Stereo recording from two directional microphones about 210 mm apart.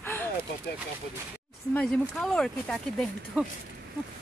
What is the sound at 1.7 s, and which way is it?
Speech, 5° left (ahead or behind).